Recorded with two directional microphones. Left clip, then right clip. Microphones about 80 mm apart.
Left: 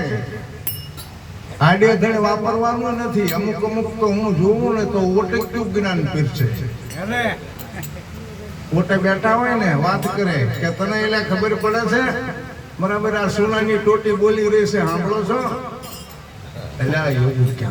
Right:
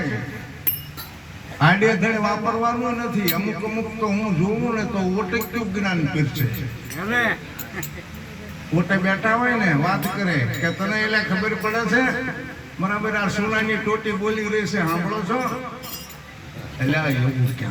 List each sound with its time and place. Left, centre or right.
1.5 s a man's voice: left
8.9 s a man's voice: left
16.9 s a man's voice: left